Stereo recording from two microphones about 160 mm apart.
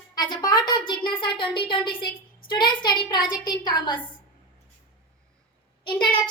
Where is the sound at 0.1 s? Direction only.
25° left (ahead or behind).